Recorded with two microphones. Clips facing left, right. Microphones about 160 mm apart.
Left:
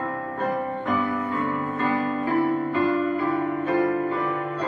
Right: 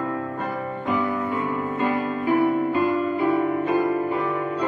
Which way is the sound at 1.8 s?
15° right (ahead or behind).